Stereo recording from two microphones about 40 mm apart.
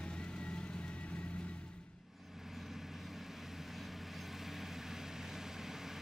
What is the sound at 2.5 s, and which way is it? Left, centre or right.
Vehicle, centre.